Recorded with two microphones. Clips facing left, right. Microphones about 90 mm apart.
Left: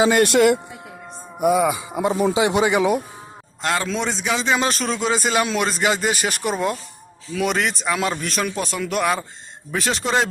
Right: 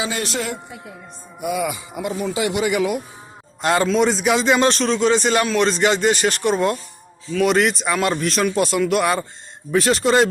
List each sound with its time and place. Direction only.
0.0 s speech: 55° left (ahead or behind)
1.5 s speech: 35° left (ahead or behind)
3.6 s a man's voice: 15° right (ahead or behind)
3.8 s a man's voice: centre (ahead or behind)